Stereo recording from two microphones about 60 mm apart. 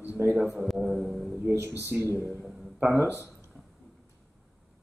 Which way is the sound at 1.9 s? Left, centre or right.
Right.